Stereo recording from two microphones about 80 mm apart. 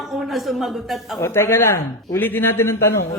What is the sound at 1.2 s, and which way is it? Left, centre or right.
A man's voice, left.